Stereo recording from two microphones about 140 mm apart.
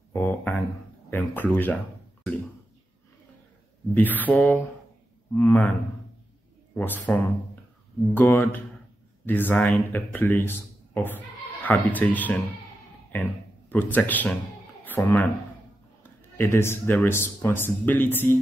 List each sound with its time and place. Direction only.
0.1 s a sound: 15° left (ahead or behind)
1.1 s speech: 15° left (ahead or behind)
3.9 s speech: 15° left (ahead or behind)
11.6 s speech: 10° left (ahead or behind)